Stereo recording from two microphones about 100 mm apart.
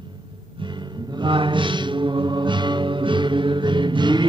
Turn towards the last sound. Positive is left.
turn(degrees=-50)  # may be behind; listen again after turning